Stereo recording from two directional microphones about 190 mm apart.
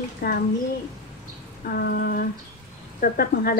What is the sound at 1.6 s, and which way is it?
Speech, 55° left (ahead or behind).